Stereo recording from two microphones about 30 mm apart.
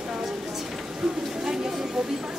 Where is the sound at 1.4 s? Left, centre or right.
Centre.